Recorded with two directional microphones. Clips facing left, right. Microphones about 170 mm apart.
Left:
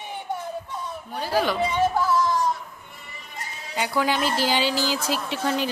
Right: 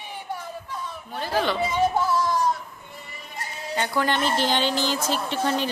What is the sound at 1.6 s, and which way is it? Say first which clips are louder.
Speech: even; 10° right (ahead or behind).